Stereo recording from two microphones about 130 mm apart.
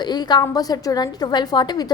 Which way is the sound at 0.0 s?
35° left (ahead or behind).